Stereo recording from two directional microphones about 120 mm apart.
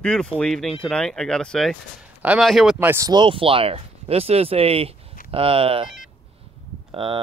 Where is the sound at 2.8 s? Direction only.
20° right (ahead or behind).